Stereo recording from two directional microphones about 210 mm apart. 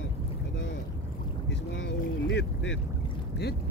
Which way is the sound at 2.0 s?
55° left (ahead or behind).